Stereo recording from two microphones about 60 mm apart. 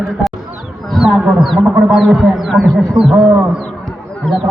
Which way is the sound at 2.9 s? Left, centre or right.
Centre.